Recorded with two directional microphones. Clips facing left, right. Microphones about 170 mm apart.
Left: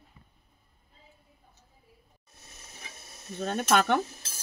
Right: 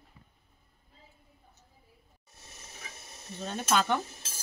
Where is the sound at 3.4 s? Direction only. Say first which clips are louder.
Left 4 dB; 60° left (ahead or behind).